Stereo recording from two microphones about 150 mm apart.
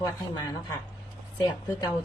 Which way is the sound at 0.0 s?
25° left (ahead or behind).